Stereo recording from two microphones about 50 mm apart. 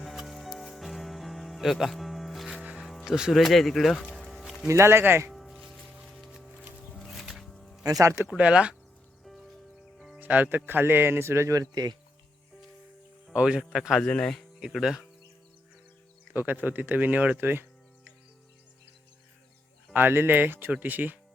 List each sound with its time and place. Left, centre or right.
0.0 s music: centre
2.6 s music: right
2.8 s music: centre
3.4 s speech: centre
4.3 s music: centre
4.7 s speech: right
5.3 s music: centre
8.4 s speech: right
10.2 s speech: right
13.4 s a man's voice: centre
14.0 s speech: centre
14.8 s a man's voice: centre
16.3 s speech: right
19.9 s speech: right